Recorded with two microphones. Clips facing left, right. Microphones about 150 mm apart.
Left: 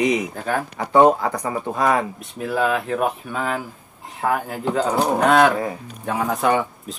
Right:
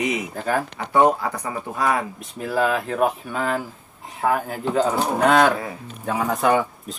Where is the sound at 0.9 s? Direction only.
25° left (ahead or behind).